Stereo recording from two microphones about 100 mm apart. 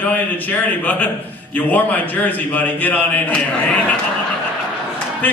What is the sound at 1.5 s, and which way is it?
A man's voice, 15° left (ahead or behind).